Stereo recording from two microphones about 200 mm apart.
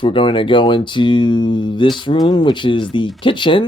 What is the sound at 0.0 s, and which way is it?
Speech, 25° left (ahead or behind).